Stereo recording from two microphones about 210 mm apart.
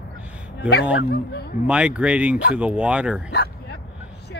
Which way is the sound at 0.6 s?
50° left (ahead or behind).